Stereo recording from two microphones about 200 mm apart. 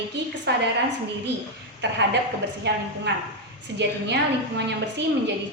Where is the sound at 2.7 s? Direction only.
55° right (ahead or behind).